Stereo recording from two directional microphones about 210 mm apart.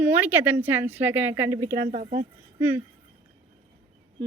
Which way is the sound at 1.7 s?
40° right (ahead or behind).